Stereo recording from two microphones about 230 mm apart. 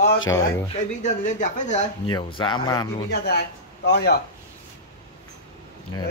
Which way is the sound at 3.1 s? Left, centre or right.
Left.